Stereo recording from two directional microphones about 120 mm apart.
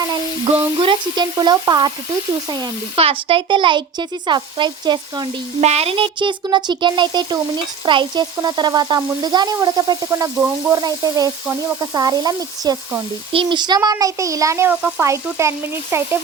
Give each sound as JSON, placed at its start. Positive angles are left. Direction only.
{"t": 0.6, "sound": "speech", "side_deg": -45}
{"t": 5.5, "sound": "speech", "side_deg": -60}
{"t": 13.3, "sound": "speech", "side_deg": -45}
{"t": 15.0, "sound": "speech", "side_deg": -25}